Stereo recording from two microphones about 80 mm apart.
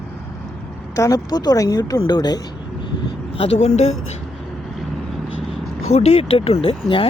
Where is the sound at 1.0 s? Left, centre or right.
Left.